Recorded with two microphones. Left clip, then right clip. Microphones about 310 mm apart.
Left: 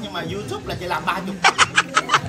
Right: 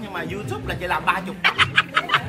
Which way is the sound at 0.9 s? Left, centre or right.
Centre.